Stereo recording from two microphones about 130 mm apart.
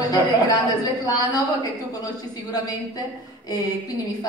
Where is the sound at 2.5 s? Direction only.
30° left (ahead or behind).